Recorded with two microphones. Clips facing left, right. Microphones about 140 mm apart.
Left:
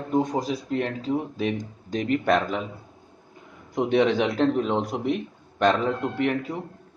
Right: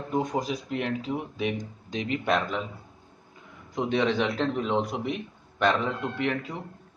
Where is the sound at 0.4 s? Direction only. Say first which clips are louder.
Left 3 dB; 35° left (ahead or behind).